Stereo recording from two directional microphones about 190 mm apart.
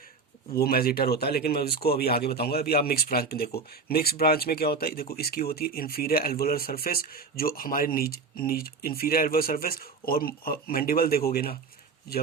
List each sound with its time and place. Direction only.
0.5 s speech: 55° left (ahead or behind)